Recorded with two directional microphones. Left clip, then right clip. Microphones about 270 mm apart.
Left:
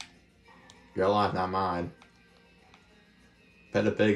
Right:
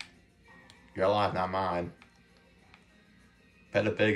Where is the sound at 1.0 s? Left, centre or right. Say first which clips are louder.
Left 1 dB; centre.